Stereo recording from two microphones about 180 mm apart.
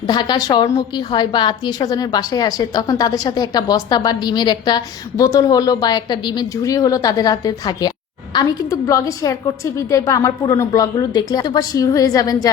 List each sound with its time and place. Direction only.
0.1 s a woman's voice: 25° left (ahead or behind)